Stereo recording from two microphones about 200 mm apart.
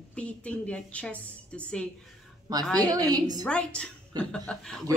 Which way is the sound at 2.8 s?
20° right (ahead or behind).